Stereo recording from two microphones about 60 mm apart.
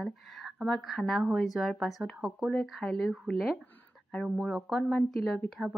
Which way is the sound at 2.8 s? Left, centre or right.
Centre.